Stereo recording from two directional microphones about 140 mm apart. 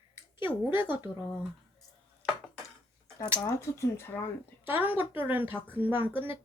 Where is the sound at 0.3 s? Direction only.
15° right (ahead or behind).